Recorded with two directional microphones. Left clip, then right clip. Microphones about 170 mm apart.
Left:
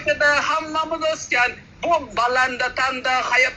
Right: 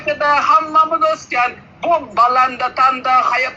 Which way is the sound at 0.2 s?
30° left (ahead or behind).